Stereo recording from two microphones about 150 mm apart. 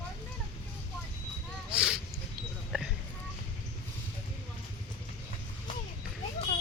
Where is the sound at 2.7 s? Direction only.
5° right (ahead or behind).